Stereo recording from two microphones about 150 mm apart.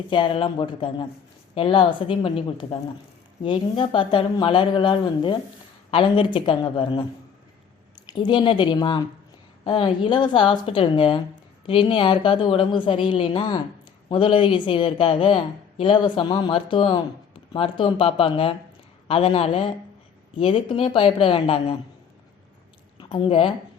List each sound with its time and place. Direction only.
0.1 s a woman's voice: 35° left (ahead or behind)
23.0 s speech: 35° left (ahead or behind)